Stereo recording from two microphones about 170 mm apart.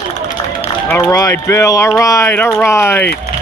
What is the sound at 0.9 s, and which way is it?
Speech, 20° left (ahead or behind).